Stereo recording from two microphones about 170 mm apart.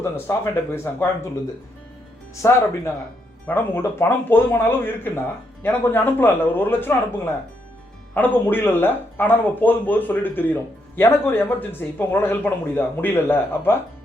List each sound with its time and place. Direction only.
0.0 s speech: 15° left (ahead or behind)
2.4 s speech: 15° left (ahead or behind)
8.1 s speech: 10° left (ahead or behind)